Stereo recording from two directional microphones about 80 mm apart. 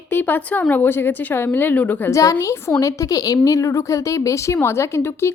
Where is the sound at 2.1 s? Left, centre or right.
Left.